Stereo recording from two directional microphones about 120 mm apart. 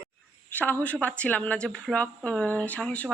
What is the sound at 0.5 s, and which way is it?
A woman's voice, 15° left (ahead or behind).